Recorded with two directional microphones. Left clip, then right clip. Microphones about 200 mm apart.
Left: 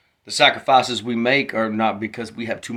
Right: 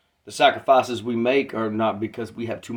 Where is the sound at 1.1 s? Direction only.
50° left (ahead or behind).